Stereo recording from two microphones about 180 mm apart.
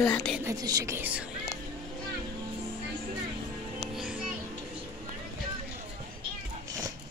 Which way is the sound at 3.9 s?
Centre (ahead or behind).